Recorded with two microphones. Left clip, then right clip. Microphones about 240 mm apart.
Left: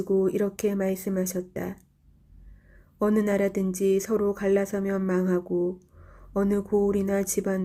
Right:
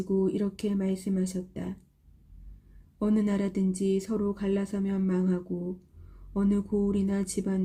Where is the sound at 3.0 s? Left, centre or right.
Centre.